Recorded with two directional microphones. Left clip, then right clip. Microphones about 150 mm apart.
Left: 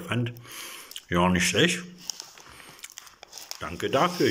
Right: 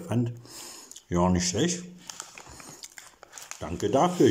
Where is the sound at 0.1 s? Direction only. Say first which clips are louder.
Even; 45° right (ahead or behind).